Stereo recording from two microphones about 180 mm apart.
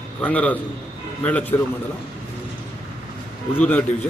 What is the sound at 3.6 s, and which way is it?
Speech, 10° left (ahead or behind).